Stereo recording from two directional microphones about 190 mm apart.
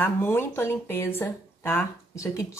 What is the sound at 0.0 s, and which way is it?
Speech, 10° left (ahead or behind).